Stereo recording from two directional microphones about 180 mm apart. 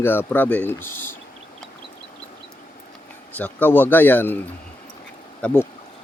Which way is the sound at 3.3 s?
10° left (ahead or behind).